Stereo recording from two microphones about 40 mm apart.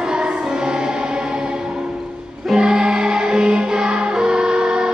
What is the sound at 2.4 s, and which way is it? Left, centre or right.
Music, centre.